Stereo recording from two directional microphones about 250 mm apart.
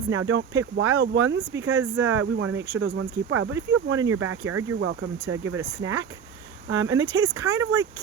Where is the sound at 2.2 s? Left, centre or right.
Right.